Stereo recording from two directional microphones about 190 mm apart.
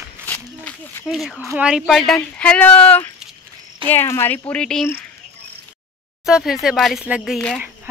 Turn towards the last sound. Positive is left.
turn(degrees=-5)  # may be behind; listen again after turning